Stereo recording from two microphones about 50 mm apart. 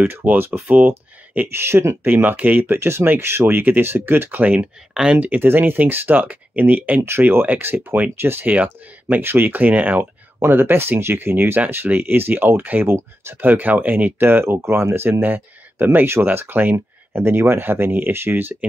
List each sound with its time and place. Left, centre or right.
0.0 s speech: right
1.5 s speech: right
2.0 s speech: right
4.4 s speech: right
4.9 s speech: centre
5.2 s speech: right
5.5 s speech: right
7.1 s speech: right
7.4 s speech: right
10.4 s speech: right
12.8 s speech: right
13.4 s speech: right
14.2 s speech: right
15.2 s speech: right